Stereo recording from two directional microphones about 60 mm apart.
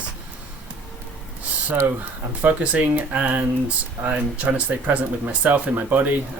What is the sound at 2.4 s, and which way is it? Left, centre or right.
Speech, right.